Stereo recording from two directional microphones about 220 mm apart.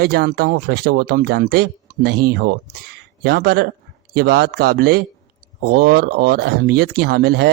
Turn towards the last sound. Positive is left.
turn(degrees=-45)  # may be behind; listen again after turning